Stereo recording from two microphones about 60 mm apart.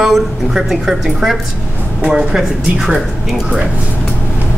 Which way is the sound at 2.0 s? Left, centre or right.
Centre.